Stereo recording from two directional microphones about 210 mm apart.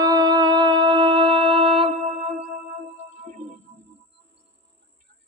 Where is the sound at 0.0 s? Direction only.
20° right (ahead or behind).